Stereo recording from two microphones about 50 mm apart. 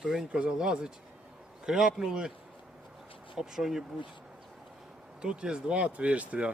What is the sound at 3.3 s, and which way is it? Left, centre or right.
Speech, centre.